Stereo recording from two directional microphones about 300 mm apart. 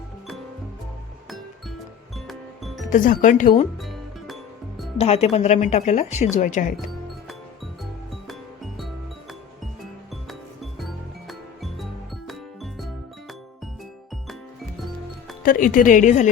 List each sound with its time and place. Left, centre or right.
2.1 s music: centre
2.9 s speech: left
3.8 s music: centre
4.9 s speech: left
8.3 s music: centre
10.2 s music: centre
15.4 s speech: left